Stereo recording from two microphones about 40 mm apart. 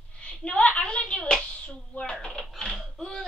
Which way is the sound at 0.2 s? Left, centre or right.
Left.